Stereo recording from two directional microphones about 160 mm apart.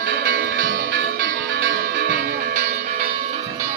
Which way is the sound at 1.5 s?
75° right (ahead or behind).